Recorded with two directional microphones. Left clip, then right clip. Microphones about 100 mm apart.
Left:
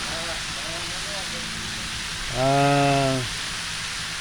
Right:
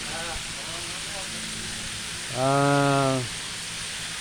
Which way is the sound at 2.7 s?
30° right (ahead or behind).